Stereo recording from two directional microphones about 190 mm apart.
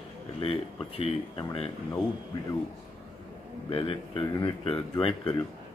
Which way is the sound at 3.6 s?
30° left (ahead or behind).